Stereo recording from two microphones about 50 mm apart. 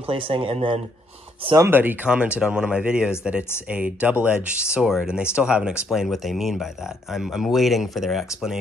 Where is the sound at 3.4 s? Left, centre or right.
Left.